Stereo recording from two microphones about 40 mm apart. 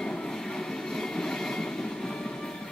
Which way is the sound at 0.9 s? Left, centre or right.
Centre.